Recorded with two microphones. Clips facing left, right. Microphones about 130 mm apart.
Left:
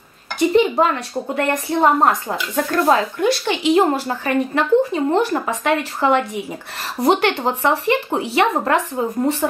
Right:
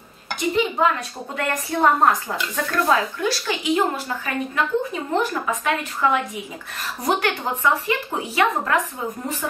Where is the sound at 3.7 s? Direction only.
35° left (ahead or behind).